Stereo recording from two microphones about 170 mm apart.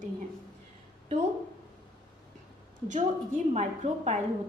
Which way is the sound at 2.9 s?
45° right (ahead or behind).